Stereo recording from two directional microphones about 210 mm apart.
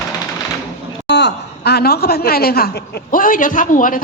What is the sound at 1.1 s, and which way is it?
A woman's voice, 55° left (ahead or behind).